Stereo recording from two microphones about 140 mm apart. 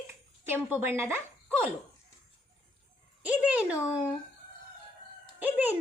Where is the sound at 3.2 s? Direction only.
10° right (ahead or behind).